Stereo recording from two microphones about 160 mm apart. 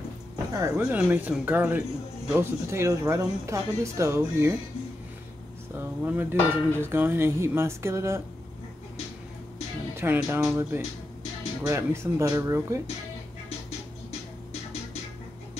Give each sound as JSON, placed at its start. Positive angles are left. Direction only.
{"t": 0.5, "sound": "speech", "side_deg": -20}
{"t": 0.9, "sound": "dishes", "side_deg": -10}
{"t": 5.8, "sound": "dishes", "side_deg": -15}
{"t": 9.9, "sound": "dishes", "side_deg": -15}
{"t": 11.6, "sound": "speech", "side_deg": -15}